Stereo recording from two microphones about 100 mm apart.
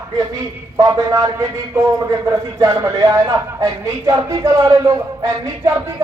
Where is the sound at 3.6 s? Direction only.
30° right (ahead or behind).